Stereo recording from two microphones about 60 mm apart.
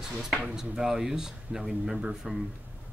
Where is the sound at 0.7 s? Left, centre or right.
Centre.